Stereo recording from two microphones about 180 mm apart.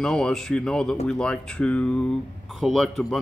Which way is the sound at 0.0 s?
5° left (ahead or behind).